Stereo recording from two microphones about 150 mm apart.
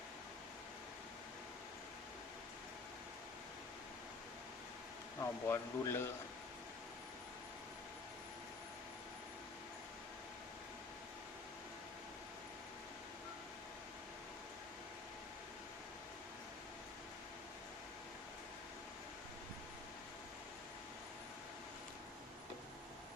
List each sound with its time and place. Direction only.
5.2 s speech: 20° left (ahead or behind)